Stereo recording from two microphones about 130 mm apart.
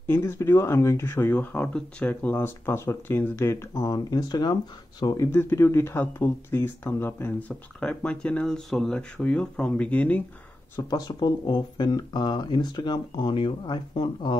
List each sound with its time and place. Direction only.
0.0 s speech: 20° left (ahead or behind)
5.3 s speech: 15° left (ahead or behind)
10.8 s speech: 30° left (ahead or behind)